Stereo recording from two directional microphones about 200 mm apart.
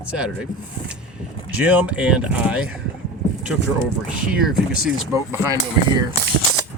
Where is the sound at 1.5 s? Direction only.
5° right (ahead or behind).